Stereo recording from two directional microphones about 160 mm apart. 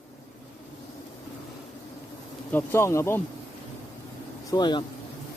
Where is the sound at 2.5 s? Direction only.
15° left (ahead or behind).